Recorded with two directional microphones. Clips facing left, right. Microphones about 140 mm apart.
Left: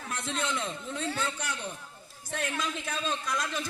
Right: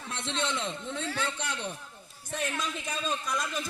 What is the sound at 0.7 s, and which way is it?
Speech, 5° left (ahead or behind).